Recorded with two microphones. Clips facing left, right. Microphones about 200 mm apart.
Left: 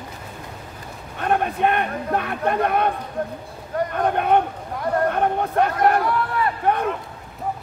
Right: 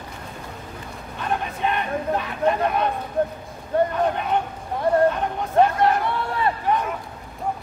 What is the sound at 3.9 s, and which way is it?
Speech, 55° left (ahead or behind).